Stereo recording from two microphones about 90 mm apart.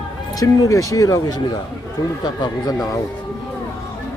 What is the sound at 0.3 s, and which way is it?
Speech, 40° left (ahead or behind).